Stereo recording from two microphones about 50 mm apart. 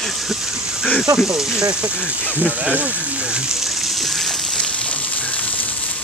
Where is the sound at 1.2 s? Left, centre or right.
Centre.